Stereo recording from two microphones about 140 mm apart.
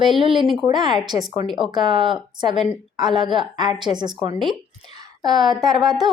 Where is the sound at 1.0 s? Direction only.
30° right (ahead or behind).